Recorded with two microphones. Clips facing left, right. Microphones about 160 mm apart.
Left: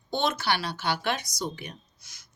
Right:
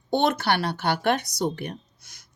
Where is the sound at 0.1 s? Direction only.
60° right (ahead or behind).